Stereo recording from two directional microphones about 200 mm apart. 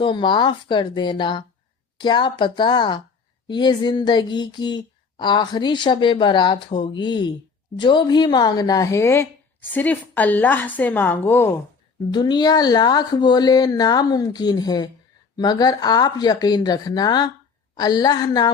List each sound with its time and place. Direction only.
0.0 s a woman's voice: 25° left (ahead or behind)
12.1 s speech: 20° left (ahead or behind)